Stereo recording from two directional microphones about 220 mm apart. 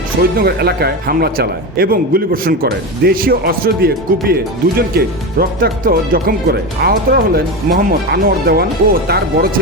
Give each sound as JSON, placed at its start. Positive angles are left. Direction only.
{"t": 0.2, "sound": "speech", "side_deg": -45}